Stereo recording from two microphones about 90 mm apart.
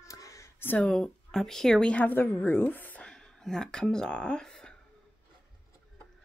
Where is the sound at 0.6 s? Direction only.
20° left (ahead or behind).